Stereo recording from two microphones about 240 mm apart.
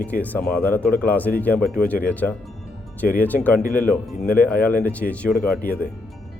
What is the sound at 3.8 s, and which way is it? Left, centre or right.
Speech, centre.